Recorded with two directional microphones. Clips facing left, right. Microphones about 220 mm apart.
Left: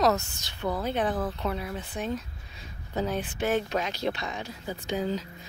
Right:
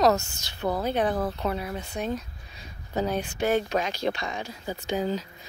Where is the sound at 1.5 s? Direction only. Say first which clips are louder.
Right 2 dB; centre (ahead or behind).